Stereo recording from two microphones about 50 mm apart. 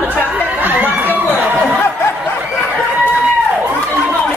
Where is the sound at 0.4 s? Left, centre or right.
Right.